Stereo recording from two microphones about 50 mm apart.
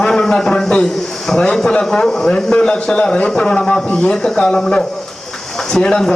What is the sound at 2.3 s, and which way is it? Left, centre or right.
A man's voice, left.